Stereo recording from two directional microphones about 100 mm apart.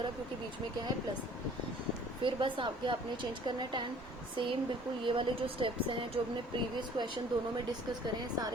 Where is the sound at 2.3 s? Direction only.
55° right (ahead or behind).